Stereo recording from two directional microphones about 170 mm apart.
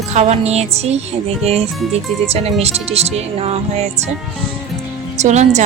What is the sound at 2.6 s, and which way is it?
Speech, 40° right (ahead or behind).